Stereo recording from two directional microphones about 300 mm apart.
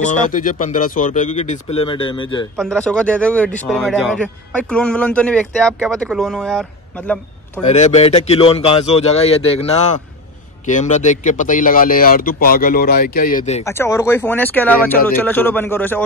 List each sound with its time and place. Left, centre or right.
0.0 s speech: left
2.5 s speech: centre
7.7 s speech: left
13.7 s speech: centre